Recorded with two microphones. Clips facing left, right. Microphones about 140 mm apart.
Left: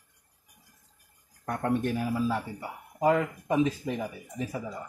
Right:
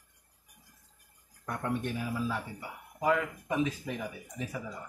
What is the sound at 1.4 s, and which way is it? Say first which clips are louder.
Speech: left 5 dB; 45° left (ahead or behind).